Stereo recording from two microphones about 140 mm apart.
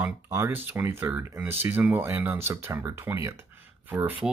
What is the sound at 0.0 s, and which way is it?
Speech, 15° right (ahead or behind).